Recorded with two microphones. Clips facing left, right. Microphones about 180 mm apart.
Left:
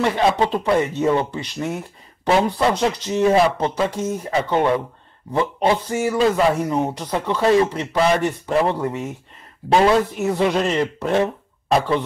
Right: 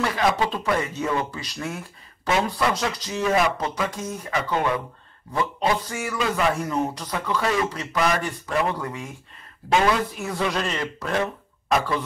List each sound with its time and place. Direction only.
0.0 s speech: 25° left (ahead or behind)